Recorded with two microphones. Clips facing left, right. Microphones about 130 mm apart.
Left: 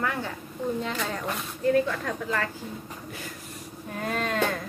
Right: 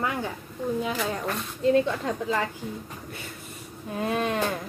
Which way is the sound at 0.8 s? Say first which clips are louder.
Right 2 dB; 5° right (ahead or behind).